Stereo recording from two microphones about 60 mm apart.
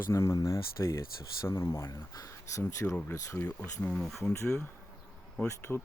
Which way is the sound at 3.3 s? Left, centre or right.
Left.